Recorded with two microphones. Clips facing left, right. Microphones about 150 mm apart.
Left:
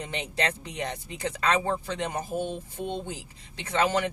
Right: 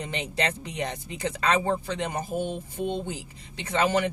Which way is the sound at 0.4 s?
20° right (ahead or behind).